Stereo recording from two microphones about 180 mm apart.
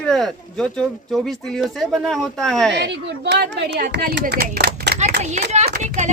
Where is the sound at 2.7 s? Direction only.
70° right (ahead or behind).